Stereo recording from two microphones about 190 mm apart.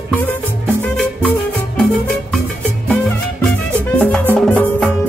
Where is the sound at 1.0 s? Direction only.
5° left (ahead or behind).